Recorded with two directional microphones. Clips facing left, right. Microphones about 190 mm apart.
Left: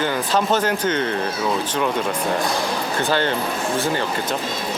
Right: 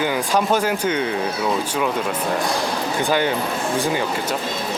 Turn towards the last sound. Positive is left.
turn(degrees=-10)  # may be behind; listen again after turning